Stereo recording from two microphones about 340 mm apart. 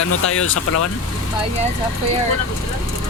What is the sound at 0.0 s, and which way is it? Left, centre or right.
Speech, left.